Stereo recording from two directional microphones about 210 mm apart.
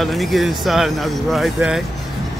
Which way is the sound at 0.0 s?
Centre (ahead or behind).